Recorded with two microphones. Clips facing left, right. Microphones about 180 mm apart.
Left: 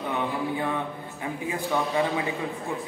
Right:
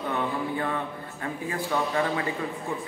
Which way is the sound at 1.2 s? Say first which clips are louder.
Left 1 dB; 15° left (ahead or behind).